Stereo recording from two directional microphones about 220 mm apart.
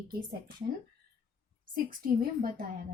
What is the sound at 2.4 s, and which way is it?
Speech, 40° right (ahead or behind).